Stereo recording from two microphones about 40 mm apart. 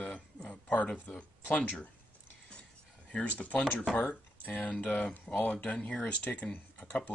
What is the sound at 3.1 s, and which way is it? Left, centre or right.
Speech, left.